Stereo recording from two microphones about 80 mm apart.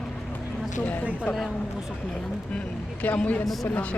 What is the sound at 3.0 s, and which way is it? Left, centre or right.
Speech, centre.